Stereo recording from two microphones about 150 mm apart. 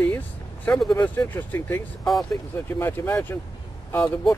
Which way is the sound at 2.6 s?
15° left (ahead or behind).